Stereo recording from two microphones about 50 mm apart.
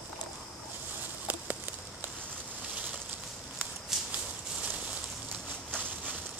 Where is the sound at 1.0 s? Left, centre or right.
Right.